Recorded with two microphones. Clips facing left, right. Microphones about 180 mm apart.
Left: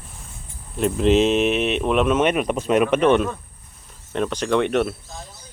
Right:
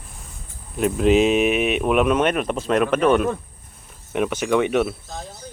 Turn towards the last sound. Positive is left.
turn(degrees=-5)  # may be behind; listen again after turning